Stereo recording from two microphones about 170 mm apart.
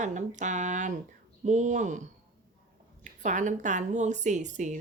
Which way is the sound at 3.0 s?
45° right (ahead or behind).